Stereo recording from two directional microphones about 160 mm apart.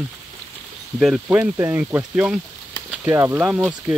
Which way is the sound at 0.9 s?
5° right (ahead or behind).